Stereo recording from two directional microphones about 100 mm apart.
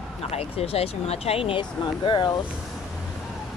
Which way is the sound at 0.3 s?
90° left.